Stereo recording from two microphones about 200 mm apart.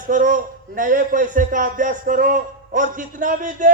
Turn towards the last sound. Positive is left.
turn(degrees=-40)  # may be behind; listen again after turning